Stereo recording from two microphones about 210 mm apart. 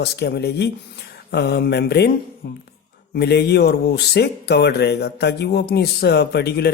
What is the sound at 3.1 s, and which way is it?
Speech, 50° left (ahead or behind).